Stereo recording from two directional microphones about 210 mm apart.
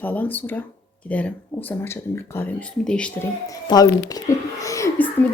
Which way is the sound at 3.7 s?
20° left (ahead or behind).